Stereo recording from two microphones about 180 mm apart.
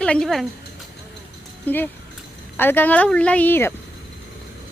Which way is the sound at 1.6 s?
10° left (ahead or behind).